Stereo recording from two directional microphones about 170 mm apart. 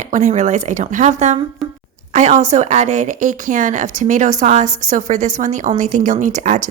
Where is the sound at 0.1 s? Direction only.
45° right (ahead or behind).